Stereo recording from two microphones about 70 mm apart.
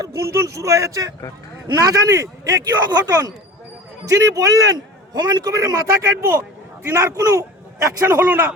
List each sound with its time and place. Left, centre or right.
0.2 s a man's voice: right
8.0 s a man's voice: right